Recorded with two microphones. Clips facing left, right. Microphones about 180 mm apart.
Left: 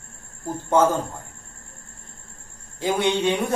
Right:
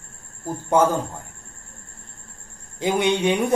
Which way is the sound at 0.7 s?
10° right (ahead or behind).